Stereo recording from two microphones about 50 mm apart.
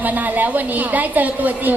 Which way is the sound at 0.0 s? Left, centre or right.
Right.